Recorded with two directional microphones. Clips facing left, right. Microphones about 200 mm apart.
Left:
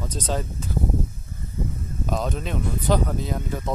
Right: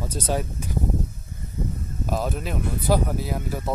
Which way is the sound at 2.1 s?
5° right (ahead or behind).